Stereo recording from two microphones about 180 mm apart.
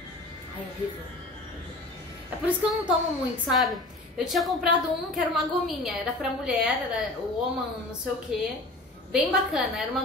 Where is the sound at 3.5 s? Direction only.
Centre (ahead or behind).